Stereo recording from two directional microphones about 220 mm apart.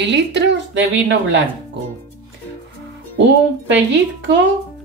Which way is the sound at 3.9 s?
55° right (ahead or behind).